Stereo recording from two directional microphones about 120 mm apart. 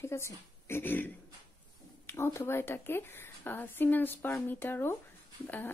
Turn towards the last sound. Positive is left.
turn(degrees=15)  # may be behind; listen again after turning